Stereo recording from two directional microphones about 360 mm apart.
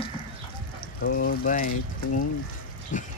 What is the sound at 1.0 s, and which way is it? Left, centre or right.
Speech, left.